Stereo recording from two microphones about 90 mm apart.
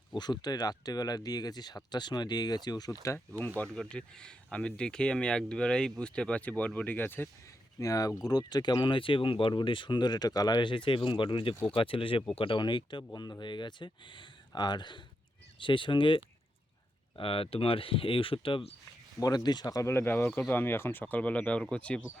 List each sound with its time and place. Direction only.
0.1 s speech: 55° left (ahead or behind)
3.7 s speech: 5° left (ahead or behind); by 7.3 s 25° left (ahead or behind)
7.8 s speech: 40° left (ahead or behind); by 11.5 s 70° left (ahead or behind)
11.7 s speech: 80° left
12.4 s speech: 65° left (ahead or behind)
17.2 s speech: 85° left
19.2 s speech: 50° left (ahead or behind)
19.9 s speech: 25° left (ahead or behind); by 22.0 s 10° left (ahead or behind)